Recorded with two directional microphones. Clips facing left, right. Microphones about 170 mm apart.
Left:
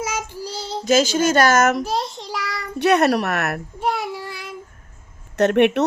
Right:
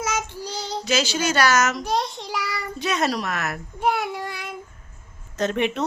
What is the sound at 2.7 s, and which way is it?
Speech, 65° left (ahead or behind).